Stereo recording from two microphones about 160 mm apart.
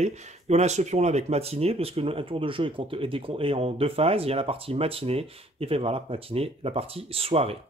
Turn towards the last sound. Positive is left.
turn(degrees=-40)  # may be behind; listen again after turning